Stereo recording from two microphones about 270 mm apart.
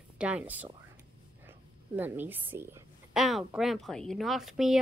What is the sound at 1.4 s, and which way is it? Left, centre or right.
A woman's voice, centre.